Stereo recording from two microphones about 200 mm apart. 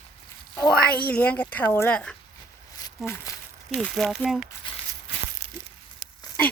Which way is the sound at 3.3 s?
15° left (ahead or behind).